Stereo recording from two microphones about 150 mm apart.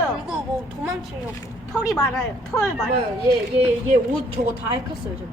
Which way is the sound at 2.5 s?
15° left (ahead or behind).